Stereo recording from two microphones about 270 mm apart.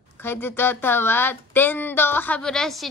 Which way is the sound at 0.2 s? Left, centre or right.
Centre.